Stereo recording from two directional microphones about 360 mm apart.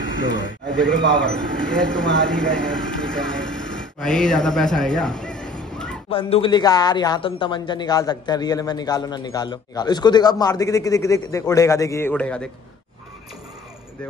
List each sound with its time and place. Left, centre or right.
0.3 s a man's voice: left
0.7 s speech: centre
3.2 s a sound: centre
4.2 s speech: centre
6.0 s speech: centre